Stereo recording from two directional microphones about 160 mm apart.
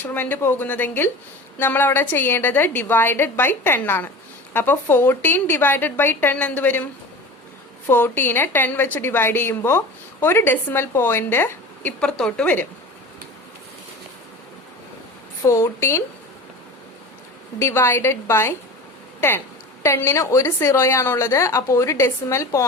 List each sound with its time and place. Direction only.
0.0 s a woman's voice: 10° left (ahead or behind)
7.9 s a woman's voice: 15° left (ahead or behind)
15.4 s a woman's voice: 15° left (ahead or behind)
17.6 s a woman's voice: 15° left (ahead or behind)
19.8 s a woman's voice: 15° left (ahead or behind)